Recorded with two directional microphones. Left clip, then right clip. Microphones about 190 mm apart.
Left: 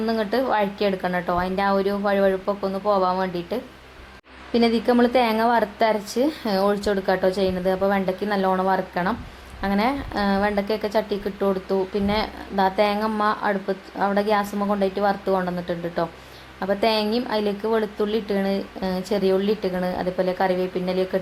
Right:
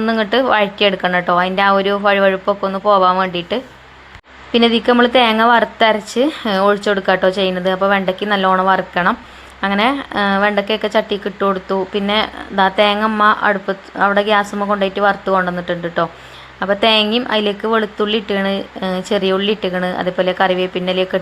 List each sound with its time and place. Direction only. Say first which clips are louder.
0.0 s a woman's voice: right 8 dB; 20° right (ahead or behind)
2.5 s speech: right 8 dB; 50° right (ahead or behind)
3.0 s a woman's voice: right 9 dB; 20° right (ahead or behind)